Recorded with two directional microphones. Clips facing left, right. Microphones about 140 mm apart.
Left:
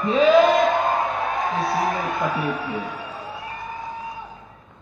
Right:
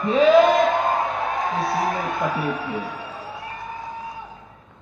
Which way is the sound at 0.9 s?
25° right (ahead or behind).